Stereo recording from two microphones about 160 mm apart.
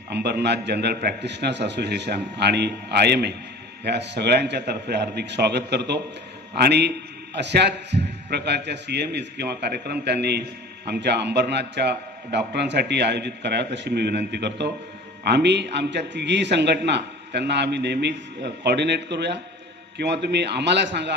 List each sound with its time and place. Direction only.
0.1 s a man's voice: 90° right